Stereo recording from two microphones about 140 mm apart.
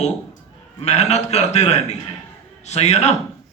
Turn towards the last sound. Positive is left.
turn(degrees=50)  # may be behind; listen again after turning